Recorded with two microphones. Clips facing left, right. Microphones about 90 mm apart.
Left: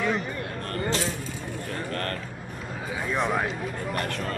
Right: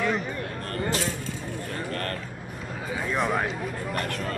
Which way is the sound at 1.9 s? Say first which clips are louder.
Left 1 dB; 40° left (ahead or behind).